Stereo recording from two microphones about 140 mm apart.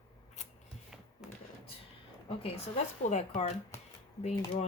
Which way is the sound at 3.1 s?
55° left (ahead or behind).